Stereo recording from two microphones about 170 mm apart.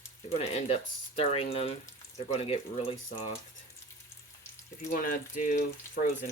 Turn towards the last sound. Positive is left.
turn(degrees=60)  # may be behind; listen again after turning